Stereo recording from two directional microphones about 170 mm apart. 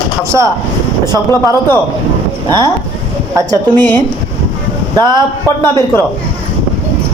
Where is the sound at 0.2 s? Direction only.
15° right (ahead or behind).